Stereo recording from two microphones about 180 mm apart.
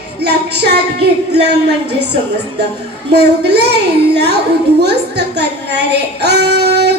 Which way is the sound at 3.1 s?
65° right (ahead or behind).